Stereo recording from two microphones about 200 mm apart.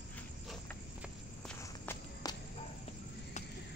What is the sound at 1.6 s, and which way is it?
Walk, 15° left (ahead or behind).